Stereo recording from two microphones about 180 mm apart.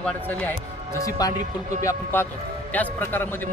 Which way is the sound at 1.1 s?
20° left (ahead or behind).